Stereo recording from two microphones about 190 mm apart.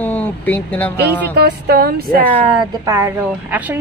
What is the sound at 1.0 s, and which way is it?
A woman's voice, 60° right (ahead or behind).